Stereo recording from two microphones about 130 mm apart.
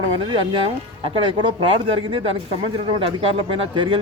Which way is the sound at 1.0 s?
45° right (ahead or behind).